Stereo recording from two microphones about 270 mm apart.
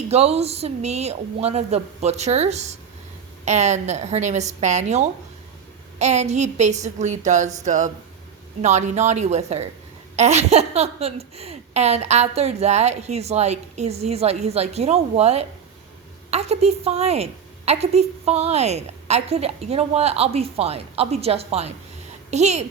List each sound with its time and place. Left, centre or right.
0.1 s a woman's voice: right